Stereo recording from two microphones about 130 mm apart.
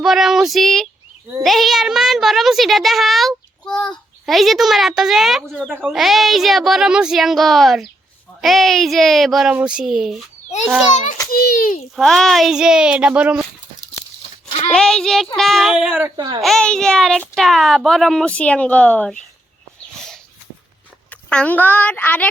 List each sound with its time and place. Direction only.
0.0 s a child's voice: 5° right (ahead or behind)
11.3 s a child's voice: 90° left
11.9 s a child's voice: 5° left (ahead or behind)
14.7 s a child's voice: 5° left (ahead or behind)
16.1 s a child's voice: 30° right (ahead or behind)
16.4 s a child's voice: 5° left (ahead or behind)
21.1 s speech: 10° left (ahead or behind)